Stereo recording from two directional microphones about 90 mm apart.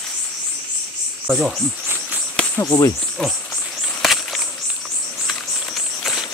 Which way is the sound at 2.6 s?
40° left (ahead or behind).